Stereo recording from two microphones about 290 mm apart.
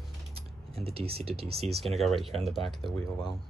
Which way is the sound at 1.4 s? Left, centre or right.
Right.